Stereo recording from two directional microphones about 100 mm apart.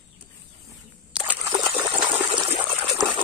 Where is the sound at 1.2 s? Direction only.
5° right (ahead or behind).